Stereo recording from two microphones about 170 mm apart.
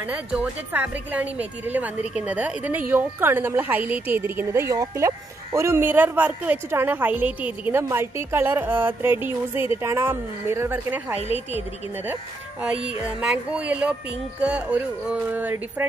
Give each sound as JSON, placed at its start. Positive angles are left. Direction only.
{"t": 0.0, "sound": "a woman's voice", "side_deg": -10}
{"t": 11.1, "sound": "a woman's voice", "side_deg": 40}
{"t": 13.2, "sound": "a woman's voice", "side_deg": -5}